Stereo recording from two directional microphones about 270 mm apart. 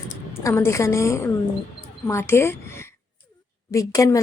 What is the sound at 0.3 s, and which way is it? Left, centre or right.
A woman's voice, centre.